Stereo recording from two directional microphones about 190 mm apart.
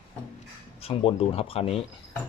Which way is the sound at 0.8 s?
30° left (ahead or behind).